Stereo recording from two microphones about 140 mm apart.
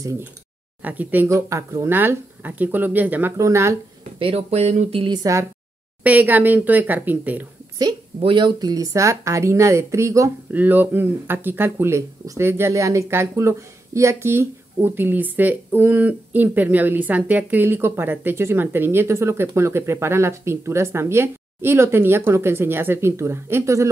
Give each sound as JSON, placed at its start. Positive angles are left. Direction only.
{"t": 0.8, "sound": "speech", "side_deg": -10}
{"t": 4.2, "sound": "speech", "side_deg": -45}
{"t": 5.0, "sound": "a woman's voice", "side_deg": -30}
{"t": 6.0, "sound": "speech", "side_deg": -10}
{"t": 8.2, "sound": "speech", "side_deg": -35}